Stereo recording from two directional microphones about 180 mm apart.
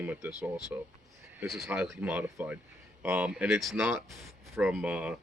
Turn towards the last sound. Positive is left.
turn(degrees=-5)  # may be behind; listen again after turning